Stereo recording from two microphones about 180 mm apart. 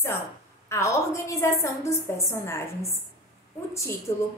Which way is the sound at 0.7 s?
15° left (ahead or behind).